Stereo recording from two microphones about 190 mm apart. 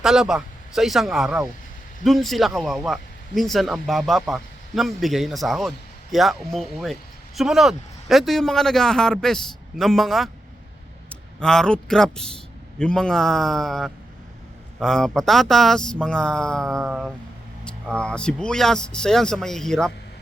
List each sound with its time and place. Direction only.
0.0 s a man's voice: 5° right (ahead or behind)